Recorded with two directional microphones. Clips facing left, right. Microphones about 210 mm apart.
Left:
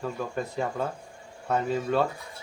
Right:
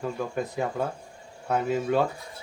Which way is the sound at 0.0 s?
10° right (ahead or behind).